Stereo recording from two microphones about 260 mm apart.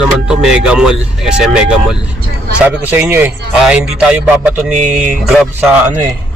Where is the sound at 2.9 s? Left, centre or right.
Centre.